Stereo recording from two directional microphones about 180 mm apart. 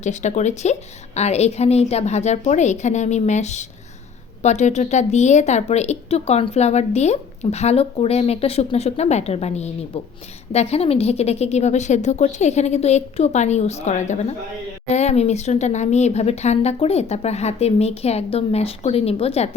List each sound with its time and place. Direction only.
0.0 s speech: 40° left (ahead or behind)